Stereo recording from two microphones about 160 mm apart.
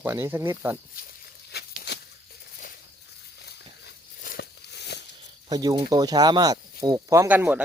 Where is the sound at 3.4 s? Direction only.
75° left (ahead or behind).